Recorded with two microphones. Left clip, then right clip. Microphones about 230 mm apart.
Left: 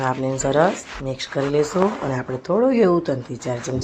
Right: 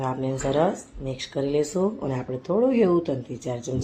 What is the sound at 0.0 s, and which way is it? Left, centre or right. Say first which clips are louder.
Speech: left 5 dB; centre.